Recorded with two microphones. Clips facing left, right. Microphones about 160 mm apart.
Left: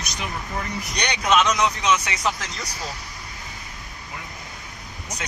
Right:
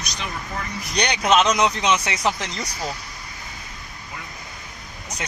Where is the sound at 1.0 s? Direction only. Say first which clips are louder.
Right 2 dB; 30° right (ahead or behind).